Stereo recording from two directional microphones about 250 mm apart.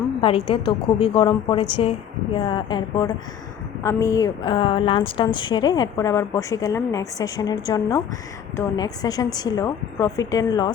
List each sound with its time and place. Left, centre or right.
0.2 s a woman's voice: left